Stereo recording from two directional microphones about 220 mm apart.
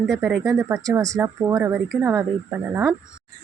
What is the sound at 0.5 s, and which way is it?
Speech, 15° right (ahead or behind).